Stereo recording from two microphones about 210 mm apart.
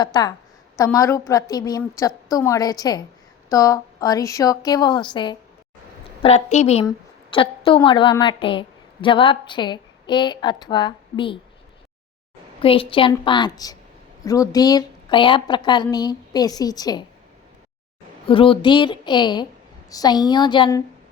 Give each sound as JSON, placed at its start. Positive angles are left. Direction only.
{"t": 0.0, "sound": "a woman's voice", "side_deg": 20}
{"t": 6.2, "sound": "a woman's voice", "side_deg": 30}
{"t": 12.5, "sound": "a woman's voice", "side_deg": 25}
{"t": 18.3, "sound": "a woman's voice", "side_deg": 25}